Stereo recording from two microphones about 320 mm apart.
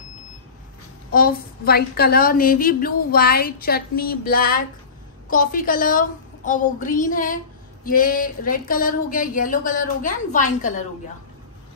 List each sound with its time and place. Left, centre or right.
1.1 s a woman's voice: left